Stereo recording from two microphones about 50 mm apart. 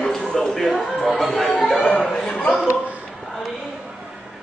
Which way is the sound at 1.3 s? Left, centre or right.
Left.